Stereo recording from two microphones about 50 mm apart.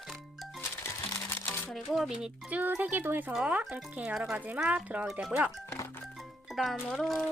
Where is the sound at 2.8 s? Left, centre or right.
Right.